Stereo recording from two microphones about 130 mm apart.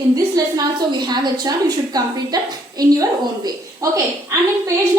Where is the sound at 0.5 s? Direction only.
30° right (ahead or behind).